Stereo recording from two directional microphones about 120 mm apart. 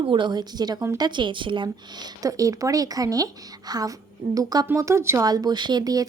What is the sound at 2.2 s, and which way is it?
Speech, 30° right (ahead or behind).